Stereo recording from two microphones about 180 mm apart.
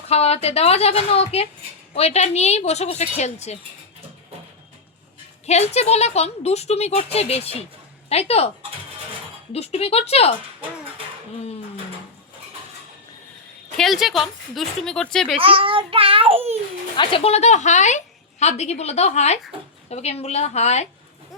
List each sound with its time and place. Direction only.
0.1 s a woman's voice: 35° left (ahead or behind)
5.5 s a woman's voice: 35° left (ahead or behind)
9.5 s a woman's voice: 35° left (ahead or behind)
13.7 s speech: centre (ahead or behind)
15.4 s a child's voice: 30° right (ahead or behind)
17.0 s a woman's voice: 30° left (ahead or behind)